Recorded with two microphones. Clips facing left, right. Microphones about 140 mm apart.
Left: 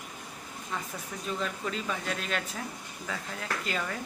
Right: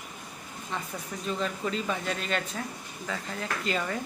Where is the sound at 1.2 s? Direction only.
Centre (ahead or behind).